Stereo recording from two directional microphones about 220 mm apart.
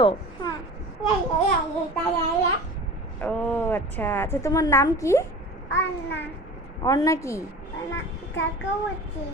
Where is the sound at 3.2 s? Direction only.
5° left (ahead or behind).